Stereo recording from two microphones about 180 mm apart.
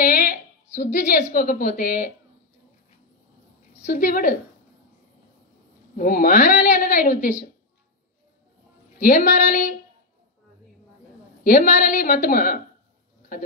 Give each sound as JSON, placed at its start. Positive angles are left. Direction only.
{"t": 0.0, "sound": "a sound", "side_deg": 50}
{"t": 0.9, "sound": "a woman's voice", "side_deg": 45}
{"t": 3.8, "sound": "a woman's voice", "side_deg": 50}
{"t": 5.9, "sound": "a woman's voice", "side_deg": 50}
{"t": 9.0, "sound": "a woman's voice", "side_deg": 50}
{"t": 11.4, "sound": "a woman's voice", "side_deg": 50}